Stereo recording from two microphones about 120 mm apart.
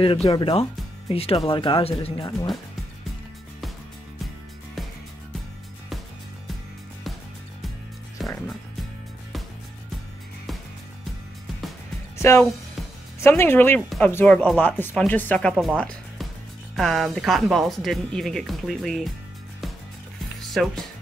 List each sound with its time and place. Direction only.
0.0 s speech: 50° left (ahead or behind)
12.2 s speech: 20° left (ahead or behind)
13.7 s speech: 5° left (ahead or behind)
15.5 s speech: 5° right (ahead or behind)
15.8 s music: 5° left (ahead or behind)
16.7 s speech: centre (ahead or behind)
20.5 s speech: centre (ahead or behind)